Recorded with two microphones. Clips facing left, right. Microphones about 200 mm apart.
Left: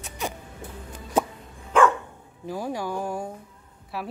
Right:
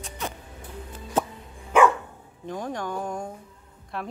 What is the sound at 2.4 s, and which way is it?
Speech, 5° left (ahead or behind).